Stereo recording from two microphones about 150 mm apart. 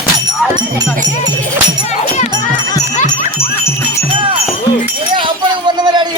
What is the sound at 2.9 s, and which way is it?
Jingle bell, 55° left (ahead or behind).